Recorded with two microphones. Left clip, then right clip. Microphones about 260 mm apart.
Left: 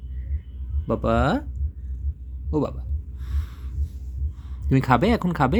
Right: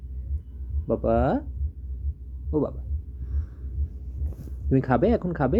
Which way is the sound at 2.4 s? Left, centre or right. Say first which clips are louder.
Left 1 dB; left.